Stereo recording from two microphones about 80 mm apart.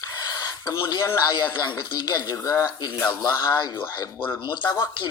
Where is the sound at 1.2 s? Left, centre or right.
Left.